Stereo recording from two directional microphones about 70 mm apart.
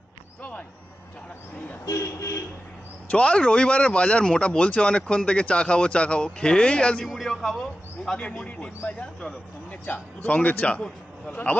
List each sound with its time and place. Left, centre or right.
0.4 s a sound: left
1.9 s speech: left
3.1 s speech: centre
7.1 s a man's voice: centre
8.2 s speech: centre